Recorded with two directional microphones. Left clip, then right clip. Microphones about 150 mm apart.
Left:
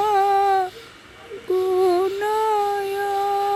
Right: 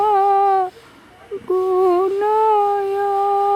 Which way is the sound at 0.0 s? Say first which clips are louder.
Right 3 dB; 30° right (ahead or behind).